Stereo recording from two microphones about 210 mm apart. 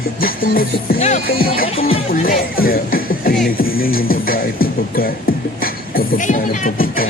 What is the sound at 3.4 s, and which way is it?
Music, 45° left (ahead or behind).